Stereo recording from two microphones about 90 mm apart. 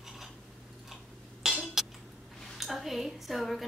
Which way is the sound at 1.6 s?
5° right (ahead or behind).